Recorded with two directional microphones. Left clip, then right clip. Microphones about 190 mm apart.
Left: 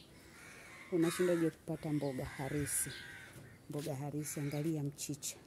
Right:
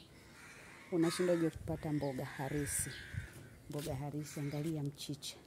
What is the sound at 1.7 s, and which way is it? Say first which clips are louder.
Speech: even; 5° right (ahead or behind).